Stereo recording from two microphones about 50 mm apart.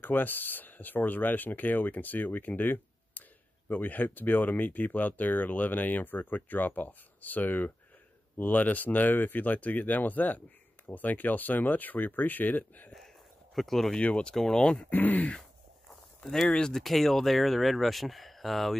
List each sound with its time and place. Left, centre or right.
0.0 s speech: left
13.6 s speech: centre
13.9 s speech: left
14.3 s speech: centre
14.6 s speech: centre
14.9 s speech: left
16.3 s speech: centre
16.8 s speech: centre